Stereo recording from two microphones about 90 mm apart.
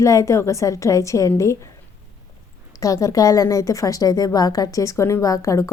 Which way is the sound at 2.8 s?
40° left (ahead or behind).